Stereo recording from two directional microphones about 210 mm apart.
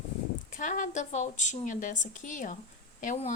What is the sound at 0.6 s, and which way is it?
A woman's voice, 35° left (ahead or behind).